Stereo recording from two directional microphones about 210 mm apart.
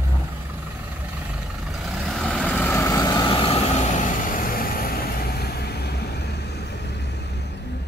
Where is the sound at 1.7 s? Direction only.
Centre (ahead or behind); by 7.3 s 55° left (ahead or behind).